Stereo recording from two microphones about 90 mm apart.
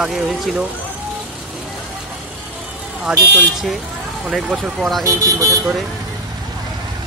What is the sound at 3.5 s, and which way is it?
Speech, 5° right (ahead or behind).